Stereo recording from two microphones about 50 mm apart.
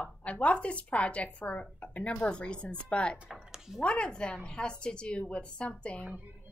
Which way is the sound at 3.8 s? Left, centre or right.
Centre.